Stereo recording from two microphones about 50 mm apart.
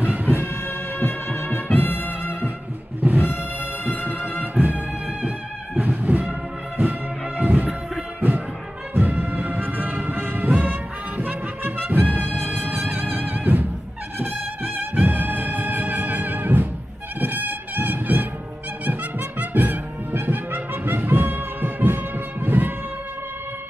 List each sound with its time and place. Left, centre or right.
0.0 s music: right
0.4 s music: left
3.0 s music: right
5.8 s music: right
8.9 s music: right